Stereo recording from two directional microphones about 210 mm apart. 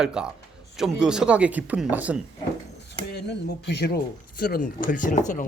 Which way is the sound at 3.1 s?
50° left (ahead or behind).